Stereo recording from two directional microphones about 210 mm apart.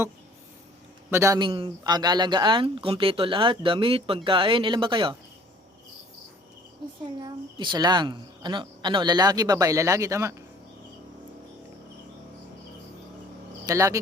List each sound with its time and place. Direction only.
1.1 s speech: 15° right (ahead or behind)
7.2 s speech: 20° right (ahead or behind)
13.7 s speech: 15° right (ahead or behind)